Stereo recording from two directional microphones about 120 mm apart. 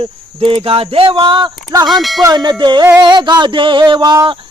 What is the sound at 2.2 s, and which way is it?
Female singing, 35° right (ahead or behind).